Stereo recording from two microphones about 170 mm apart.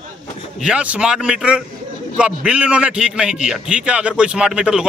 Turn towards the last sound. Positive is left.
turn(degrees=-5)  # may be behind; listen again after turning